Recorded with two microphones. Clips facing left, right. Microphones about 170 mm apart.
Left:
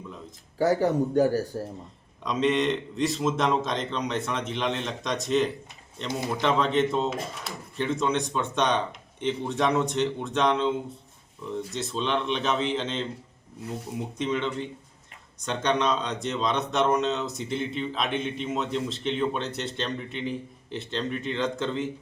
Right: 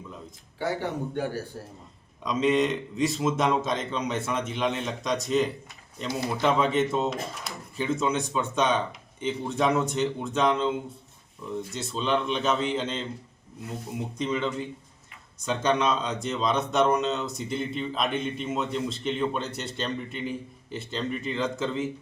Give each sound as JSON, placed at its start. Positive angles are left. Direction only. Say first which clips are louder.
{"t": 0.6, "sound": "speech", "louder": "left 7 dB", "side_deg": 40}
{"t": 2.2, "sound": "speech", "louder": "right 1 dB", "side_deg": 0}
{"t": 6.1, "sound": "a man's voice", "louder": "even", "side_deg": 20}
{"t": 6.4, "sound": "speech", "louder": "even", "side_deg": -5}
{"t": 14.2, "sound": "speech", "louder": "even", "side_deg": 0}